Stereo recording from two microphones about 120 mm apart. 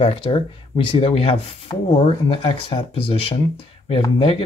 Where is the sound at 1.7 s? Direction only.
35° left (ahead or behind).